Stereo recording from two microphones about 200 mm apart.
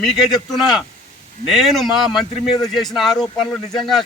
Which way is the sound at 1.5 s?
Centre (ahead or behind).